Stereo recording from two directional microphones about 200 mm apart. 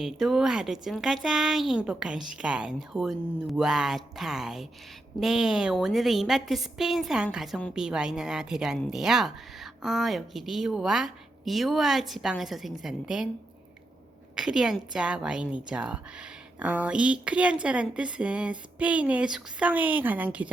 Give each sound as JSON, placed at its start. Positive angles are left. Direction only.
{"t": 0.0, "sound": "a woman's voice", "side_deg": 0}
{"t": 14.3, "sound": "a woman's voice", "side_deg": -5}